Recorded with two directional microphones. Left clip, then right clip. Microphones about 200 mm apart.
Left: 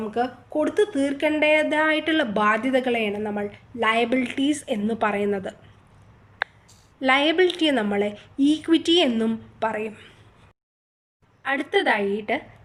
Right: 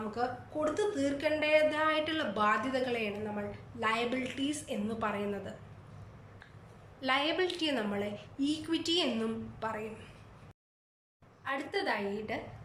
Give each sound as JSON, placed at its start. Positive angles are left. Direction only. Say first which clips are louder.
{"t": 0.1, "sound": "speech", "louder": "left 10 dB", "side_deg": 40}
{"t": 7.0, "sound": "speech", "louder": "left 12 dB", "side_deg": 35}
{"t": 11.4, "sound": "speech", "louder": "left 12 dB", "side_deg": 35}